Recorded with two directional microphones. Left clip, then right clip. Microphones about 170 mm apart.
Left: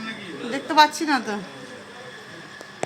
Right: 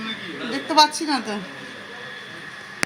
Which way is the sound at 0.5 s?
20° right (ahead or behind).